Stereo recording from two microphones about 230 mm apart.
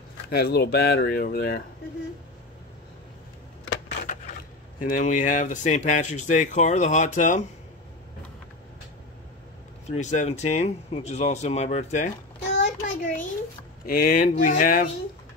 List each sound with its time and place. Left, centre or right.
0.3 s speech: left
4.7 s speech: left
9.8 s speech: left
12.5 s child singing: left
13.8 s speech: left